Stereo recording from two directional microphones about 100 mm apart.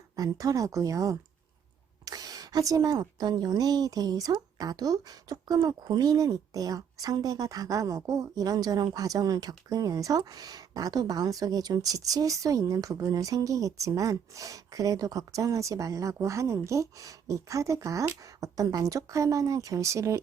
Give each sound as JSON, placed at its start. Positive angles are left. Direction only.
{"t": 0.2, "sound": "a woman's voice", "side_deg": -35}